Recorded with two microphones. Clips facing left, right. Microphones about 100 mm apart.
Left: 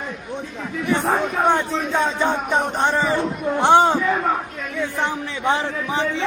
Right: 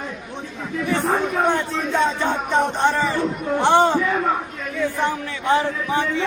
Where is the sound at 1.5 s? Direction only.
15° left (ahead or behind).